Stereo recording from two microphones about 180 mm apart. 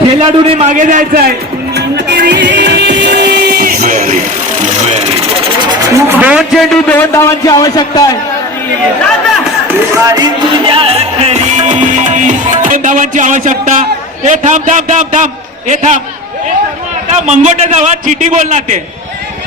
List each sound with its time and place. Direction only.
0.2 s a man's voice: 30° right (ahead or behind); by 1.3 s 50° right (ahead or behind)
1.7 s music: 65° right (ahead or behind); by 4.2 s 45° right (ahead or behind)
5.9 s a man's voice: 10° right (ahead or behind); by 8.1 s 20° left (ahead or behind)
10.1 s music: 20° right (ahead or behind); by 13.8 s 45° right (ahead or behind)
14.3 s a man's voice: 40° right (ahead or behind)
17.1 s a man's voice: 40° right (ahead or behind)